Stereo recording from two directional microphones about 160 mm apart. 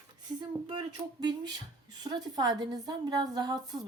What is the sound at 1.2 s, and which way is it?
A woman's voice, 25° right (ahead or behind).